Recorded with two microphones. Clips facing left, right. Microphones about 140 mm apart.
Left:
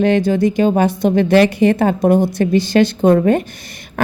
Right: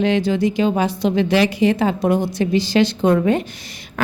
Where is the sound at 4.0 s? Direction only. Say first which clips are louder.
Left 4 dB; 55° left (ahead or behind).